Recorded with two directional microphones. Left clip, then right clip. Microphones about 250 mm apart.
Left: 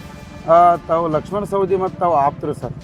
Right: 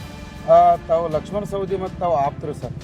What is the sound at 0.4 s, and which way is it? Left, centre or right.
A man's voice, centre.